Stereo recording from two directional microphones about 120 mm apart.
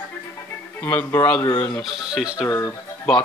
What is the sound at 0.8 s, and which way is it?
Speech, 15° left (ahead or behind).